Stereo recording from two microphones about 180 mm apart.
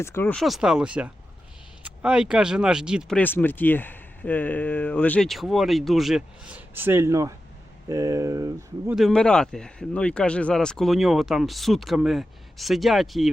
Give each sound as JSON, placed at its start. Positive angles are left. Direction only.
{"t": 0.0, "sound": "speech", "side_deg": 15}
{"t": 3.2, "sound": "speech", "side_deg": 10}
{"t": 9.0, "sound": "speech", "side_deg": 5}